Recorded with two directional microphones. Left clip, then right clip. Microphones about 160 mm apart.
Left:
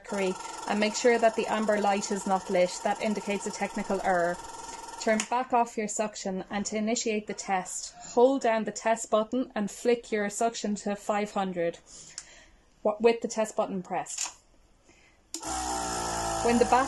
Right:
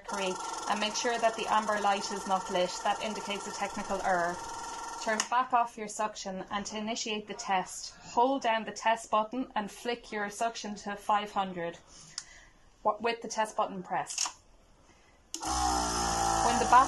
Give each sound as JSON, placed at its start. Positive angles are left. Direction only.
{"t": 0.2, "sound": "speech", "side_deg": 35}
{"t": 13.0, "sound": "speech", "side_deg": 30}
{"t": 15.4, "sound": "music", "side_deg": 0}